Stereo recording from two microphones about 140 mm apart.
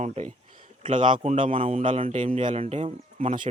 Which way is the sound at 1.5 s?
40° right (ahead or behind).